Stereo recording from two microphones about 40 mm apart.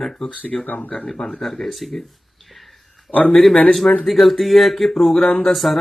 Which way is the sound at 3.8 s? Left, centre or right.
Left.